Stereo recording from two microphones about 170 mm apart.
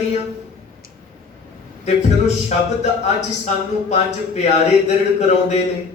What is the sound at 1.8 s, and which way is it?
A man's voice, 40° left (ahead or behind).